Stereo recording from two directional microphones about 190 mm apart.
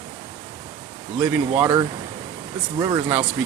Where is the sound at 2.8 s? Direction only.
15° right (ahead or behind).